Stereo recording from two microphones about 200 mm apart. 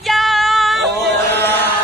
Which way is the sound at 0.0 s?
Centre (ahead or behind).